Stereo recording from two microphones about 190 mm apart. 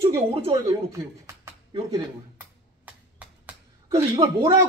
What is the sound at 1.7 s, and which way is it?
Speech, 25° right (ahead or behind).